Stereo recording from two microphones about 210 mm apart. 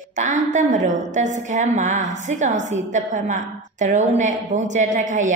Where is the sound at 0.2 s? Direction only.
35° right (ahead or behind).